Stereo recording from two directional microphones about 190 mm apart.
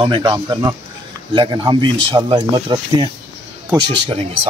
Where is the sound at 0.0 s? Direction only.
25° right (ahead or behind).